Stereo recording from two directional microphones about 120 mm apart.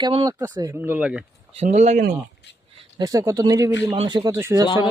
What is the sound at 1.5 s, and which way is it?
Speech, 75° right (ahead or behind).